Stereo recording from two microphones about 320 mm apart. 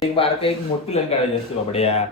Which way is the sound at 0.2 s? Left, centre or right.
Centre.